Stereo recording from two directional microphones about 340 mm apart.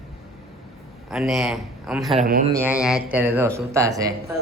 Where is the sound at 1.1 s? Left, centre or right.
Centre.